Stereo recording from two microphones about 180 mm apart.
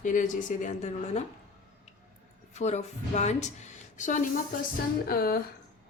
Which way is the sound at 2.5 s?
40° left (ahead or behind).